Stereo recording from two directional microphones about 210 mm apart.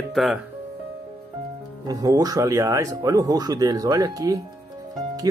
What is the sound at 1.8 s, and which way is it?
Speech, 15° right (ahead or behind).